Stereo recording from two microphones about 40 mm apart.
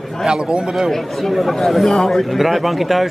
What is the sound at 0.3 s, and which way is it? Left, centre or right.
Speech, right.